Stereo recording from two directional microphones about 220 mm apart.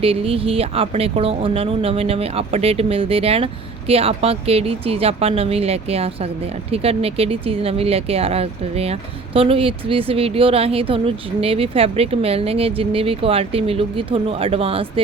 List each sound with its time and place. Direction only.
0.0 s speech: 25° right (ahead or behind)